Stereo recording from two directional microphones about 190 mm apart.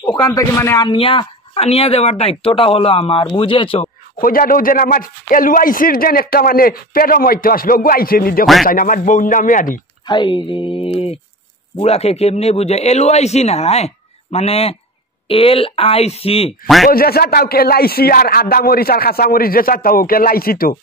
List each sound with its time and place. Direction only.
0.0 s speech: 20° left (ahead or behind)
0.8 s speech: 25° left (ahead or behind)
4.2 s a man's voice: 50° left (ahead or behind)
10.0 s speech: 25° left (ahead or behind)
16.6 s speech: centre (ahead or behind)
16.9 s a man's voice: 55° left (ahead or behind)